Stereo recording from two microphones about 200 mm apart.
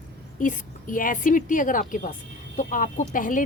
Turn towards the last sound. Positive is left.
turn(degrees=40)  # may be behind; listen again after turning